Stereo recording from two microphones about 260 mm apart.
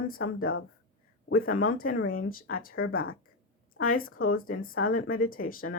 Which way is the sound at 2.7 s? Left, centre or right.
Left.